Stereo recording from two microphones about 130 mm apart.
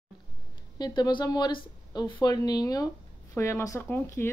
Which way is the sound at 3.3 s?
20° left (ahead or behind).